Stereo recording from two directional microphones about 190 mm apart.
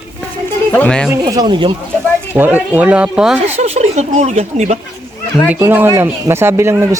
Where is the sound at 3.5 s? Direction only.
35° right (ahead or behind).